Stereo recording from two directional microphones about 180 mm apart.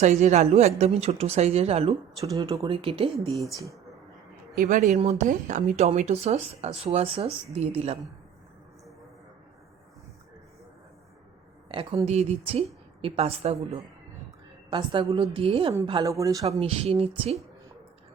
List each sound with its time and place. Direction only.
0.0 s speech: 40° right (ahead or behind)
2.2 s speech: 20° right (ahead or behind)
4.5 s speech: 45° right (ahead or behind)
11.7 s speech: 30° right (ahead or behind)
16.5 s speech: 35° right (ahead or behind)